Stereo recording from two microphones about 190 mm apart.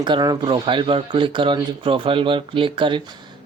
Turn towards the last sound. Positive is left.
turn(degrees=-25)  # may be behind; listen again after turning